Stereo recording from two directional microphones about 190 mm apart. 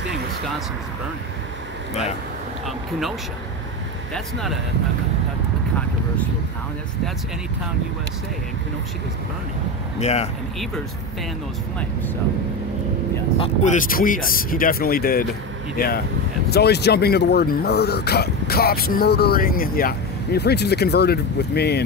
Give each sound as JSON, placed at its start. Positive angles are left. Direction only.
{"t": 4.1, "sound": "speech", "side_deg": 0}
{"t": 9.9, "sound": "speech", "side_deg": 35}
{"t": 13.7, "sound": "speech", "side_deg": 45}
{"t": 16.5, "sound": "speech", "side_deg": 60}